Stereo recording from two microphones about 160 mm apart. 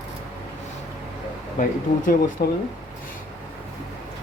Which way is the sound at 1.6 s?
55° left (ahead or behind).